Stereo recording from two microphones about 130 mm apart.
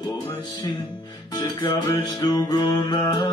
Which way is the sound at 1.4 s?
35° left (ahead or behind).